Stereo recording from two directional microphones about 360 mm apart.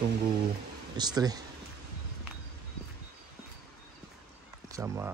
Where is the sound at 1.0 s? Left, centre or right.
Centre.